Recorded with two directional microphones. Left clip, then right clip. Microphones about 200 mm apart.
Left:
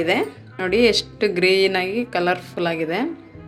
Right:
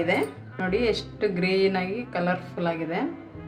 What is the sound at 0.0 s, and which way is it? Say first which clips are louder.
A woman's voice: left 4 dB; 45° left (ahead or behind).